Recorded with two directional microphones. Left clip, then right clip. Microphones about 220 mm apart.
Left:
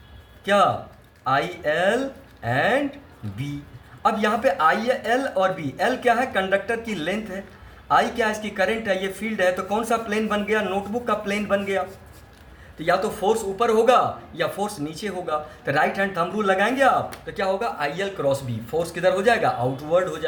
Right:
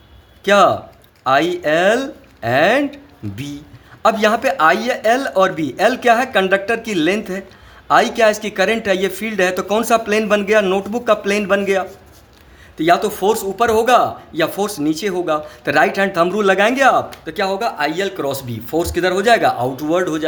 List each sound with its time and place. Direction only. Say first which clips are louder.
0.4 s speech: right 7 dB; 50° right (ahead or behind)
4.0 s speech: right 6 dB; 50° right (ahead or behind)
12.8 s speech: right 7 dB; 50° right (ahead or behind)